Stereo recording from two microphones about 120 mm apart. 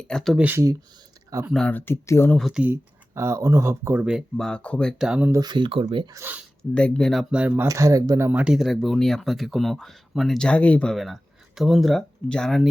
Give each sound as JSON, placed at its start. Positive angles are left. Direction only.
{"t": 0.0, "sound": "speech", "side_deg": 5}
{"t": 0.3, "sound": "speech", "side_deg": -15}
{"t": 1.5, "sound": "speech", "side_deg": 10}
{"t": 2.4, "sound": "speech", "side_deg": -5}
{"t": 3.2, "sound": "speech", "side_deg": -25}
{"t": 4.4, "sound": "speech", "side_deg": 5}
{"t": 5.0, "sound": "speech", "side_deg": -10}
{"t": 5.3, "sound": "speech", "side_deg": -35}
{"t": 6.1, "sound": "speech", "side_deg": -15}
{"t": 6.6, "sound": "speech", "side_deg": 10}
{"t": 7.7, "sound": "speech", "side_deg": -25}
{"t": 8.3, "sound": "speech", "side_deg": -10}
{"t": 8.5, "sound": "speech", "side_deg": 0}
{"t": 10.9, "sound": "speech", "side_deg": 0}